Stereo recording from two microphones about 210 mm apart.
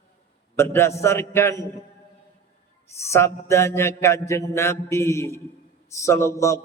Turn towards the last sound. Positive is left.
turn(degrees=15)  # may be behind; listen again after turning